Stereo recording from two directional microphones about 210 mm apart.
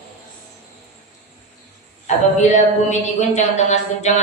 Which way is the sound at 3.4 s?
35° left (ahead or behind).